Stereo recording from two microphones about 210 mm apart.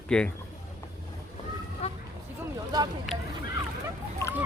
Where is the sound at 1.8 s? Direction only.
30° left (ahead or behind).